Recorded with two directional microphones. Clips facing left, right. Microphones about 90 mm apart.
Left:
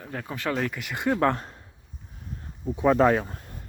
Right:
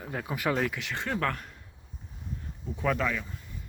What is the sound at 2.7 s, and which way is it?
Speech, 20° left (ahead or behind).